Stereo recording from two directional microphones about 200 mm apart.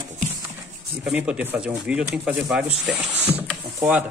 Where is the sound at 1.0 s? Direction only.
5° right (ahead or behind).